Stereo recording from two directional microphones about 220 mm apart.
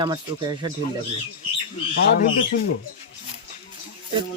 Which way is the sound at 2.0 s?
45° left (ahead or behind).